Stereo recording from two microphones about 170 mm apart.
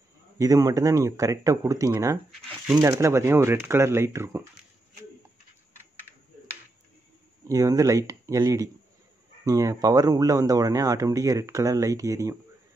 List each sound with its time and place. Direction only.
0.4 s speech: 20° right (ahead or behind)
2.3 s speech: 5° right (ahead or behind)
2.8 s speech: 15° right (ahead or behind)
7.4 s speech: 20° right (ahead or behind)